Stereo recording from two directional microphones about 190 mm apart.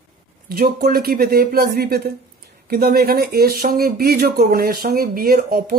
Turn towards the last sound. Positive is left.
turn(degrees=-50)  # may be behind; listen again after turning